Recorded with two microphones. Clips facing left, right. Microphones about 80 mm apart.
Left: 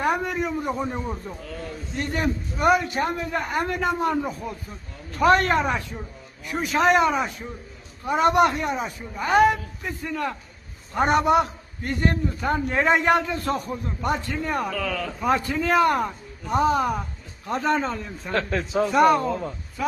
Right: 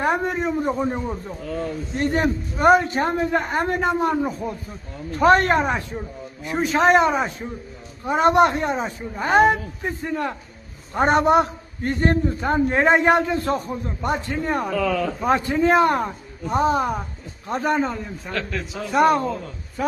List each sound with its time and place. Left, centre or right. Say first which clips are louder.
0.0 s a man's voice: right 2 dB; right
0.9 s speech: right 3 dB; centre
2.0 s a man's voice: right 4 dB; right; by 18.0 s centre
18.3 s a man's voice: left 4 dB; left
18.9 s a man's voice: right 1 dB; right
19.3 s a man's voice: left 2 dB; left